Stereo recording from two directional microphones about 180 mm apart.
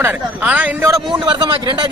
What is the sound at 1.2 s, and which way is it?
Speech, 25° right (ahead or behind).